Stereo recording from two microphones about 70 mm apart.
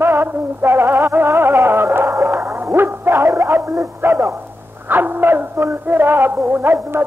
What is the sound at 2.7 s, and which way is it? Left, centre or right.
Music, right.